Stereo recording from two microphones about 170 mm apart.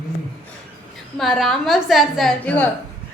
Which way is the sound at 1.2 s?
Centre (ahead or behind).